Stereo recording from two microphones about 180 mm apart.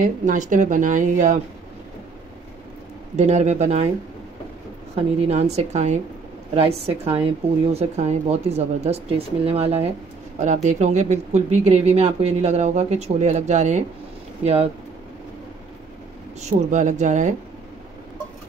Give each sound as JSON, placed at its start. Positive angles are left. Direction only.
{"t": 0.0, "sound": "speech", "side_deg": -45}
{"t": 3.2, "sound": "speech", "side_deg": -40}
{"t": 5.3, "sound": "speech", "side_deg": -35}
{"t": 16.3, "sound": "speech", "side_deg": -40}